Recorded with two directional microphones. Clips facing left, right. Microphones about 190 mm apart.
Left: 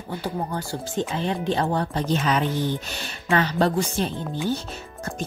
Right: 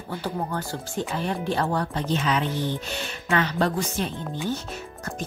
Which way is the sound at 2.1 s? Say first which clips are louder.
Left 2 dB; 45° left (ahead or behind).